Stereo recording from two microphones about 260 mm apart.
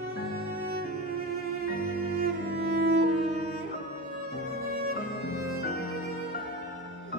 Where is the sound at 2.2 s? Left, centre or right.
Right.